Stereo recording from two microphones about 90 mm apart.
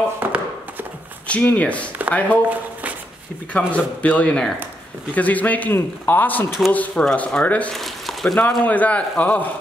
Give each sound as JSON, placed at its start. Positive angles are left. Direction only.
{"t": 0.2, "sound": "chopping", "side_deg": -15}
{"t": 1.2, "sound": "a man's voice", "side_deg": 15}
{"t": 3.5, "sound": "a man's voice", "side_deg": 15}
{"t": 7.7, "sound": "a sound", "side_deg": 0}
{"t": 8.4, "sound": "a man's voice", "side_deg": 20}